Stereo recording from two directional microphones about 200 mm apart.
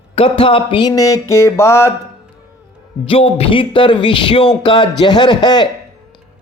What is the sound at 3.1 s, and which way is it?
Speech, 30° left (ahead or behind).